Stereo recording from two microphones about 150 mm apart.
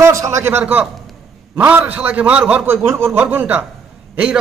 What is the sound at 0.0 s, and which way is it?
A man's voice, 20° right (ahead or behind).